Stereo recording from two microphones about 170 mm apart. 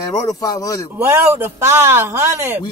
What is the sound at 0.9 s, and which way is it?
A man's voice, 15° right (ahead or behind).